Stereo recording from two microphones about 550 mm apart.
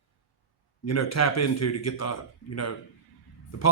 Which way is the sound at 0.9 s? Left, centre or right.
Left.